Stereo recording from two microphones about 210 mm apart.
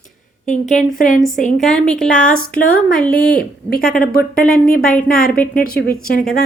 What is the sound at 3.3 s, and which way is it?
Speech, 45° left (ahead or behind).